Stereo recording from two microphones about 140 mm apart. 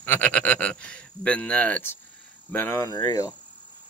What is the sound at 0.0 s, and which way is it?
Speech, 10° left (ahead or behind).